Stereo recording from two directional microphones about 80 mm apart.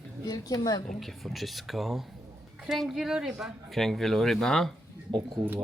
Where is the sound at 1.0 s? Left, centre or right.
Centre.